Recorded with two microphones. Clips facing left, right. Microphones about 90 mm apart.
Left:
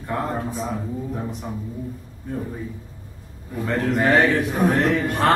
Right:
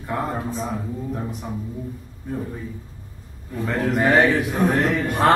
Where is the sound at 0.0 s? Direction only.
Centre (ahead or behind).